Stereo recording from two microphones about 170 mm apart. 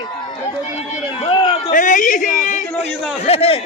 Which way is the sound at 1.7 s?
50° left (ahead or behind).